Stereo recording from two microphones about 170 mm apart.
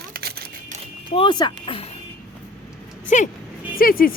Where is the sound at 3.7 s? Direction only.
60° left (ahead or behind).